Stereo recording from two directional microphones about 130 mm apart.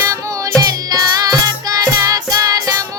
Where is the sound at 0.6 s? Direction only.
30° right (ahead or behind).